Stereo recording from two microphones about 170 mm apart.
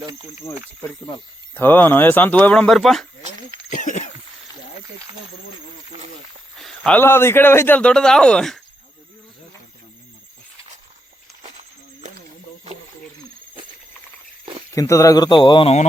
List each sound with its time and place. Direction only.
0.0 s speech: 20° right (ahead or behind)
0.8 s speech: 25° left (ahead or behind)
1.5 s speech: 10° left (ahead or behind)
3.7 s a sound: 50° left (ahead or behind)
6.6 s speech: 5° left (ahead or behind)
14.7 s speech: 20° left (ahead or behind)